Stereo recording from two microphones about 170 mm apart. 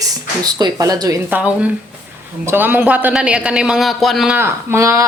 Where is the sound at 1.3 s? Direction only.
5° right (ahead or behind).